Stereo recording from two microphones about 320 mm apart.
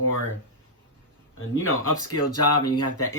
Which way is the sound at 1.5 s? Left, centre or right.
Left.